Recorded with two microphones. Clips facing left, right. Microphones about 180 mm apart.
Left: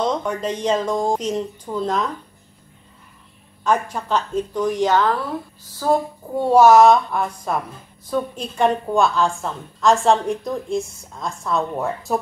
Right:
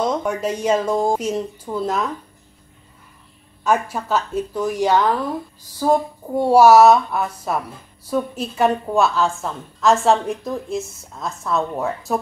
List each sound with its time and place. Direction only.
0.0 s speech: 10° right (ahead or behind)
3.6 s a woman's voice: 10° right (ahead or behind)